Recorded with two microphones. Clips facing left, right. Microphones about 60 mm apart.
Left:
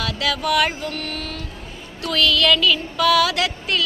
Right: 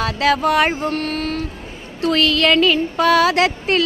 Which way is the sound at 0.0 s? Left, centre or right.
Right.